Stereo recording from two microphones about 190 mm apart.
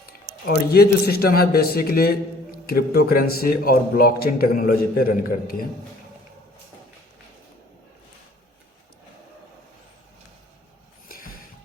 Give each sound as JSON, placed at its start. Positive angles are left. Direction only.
{"t": 0.0, "sound": "a man's voice", "side_deg": 55}
{"t": 11.1, "sound": "music", "side_deg": 50}